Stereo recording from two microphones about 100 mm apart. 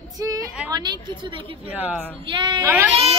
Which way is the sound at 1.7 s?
15° right (ahead or behind).